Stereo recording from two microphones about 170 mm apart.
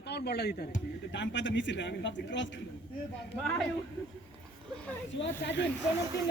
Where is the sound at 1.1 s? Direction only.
90° left.